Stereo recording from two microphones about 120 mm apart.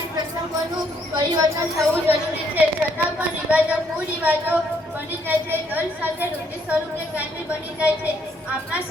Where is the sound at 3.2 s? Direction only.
10° right (ahead or behind).